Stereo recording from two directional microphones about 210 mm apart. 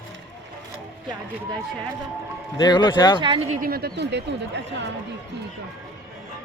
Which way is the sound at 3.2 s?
25° right (ahead or behind).